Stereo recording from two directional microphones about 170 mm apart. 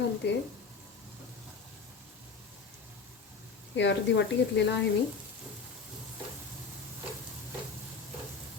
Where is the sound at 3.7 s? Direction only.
90° left.